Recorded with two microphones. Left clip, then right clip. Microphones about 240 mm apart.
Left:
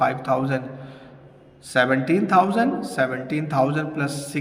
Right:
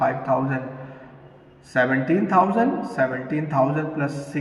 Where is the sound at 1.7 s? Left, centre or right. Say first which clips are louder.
Left 1 dB; left.